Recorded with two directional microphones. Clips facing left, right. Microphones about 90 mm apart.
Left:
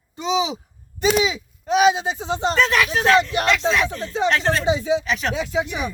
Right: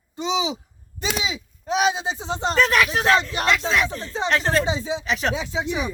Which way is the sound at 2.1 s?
35° right (ahead or behind).